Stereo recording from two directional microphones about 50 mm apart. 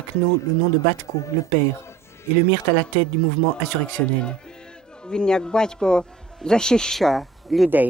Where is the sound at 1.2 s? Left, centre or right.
Left.